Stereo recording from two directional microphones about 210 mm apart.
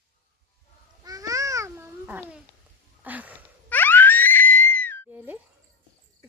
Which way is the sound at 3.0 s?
5° right (ahead or behind).